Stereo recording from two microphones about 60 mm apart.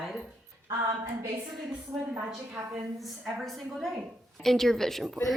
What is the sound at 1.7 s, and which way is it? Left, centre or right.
A woman's voice, centre.